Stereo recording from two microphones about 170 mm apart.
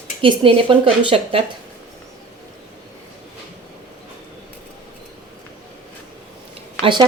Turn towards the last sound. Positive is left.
turn(degrees=-25)  # may be behind; listen again after turning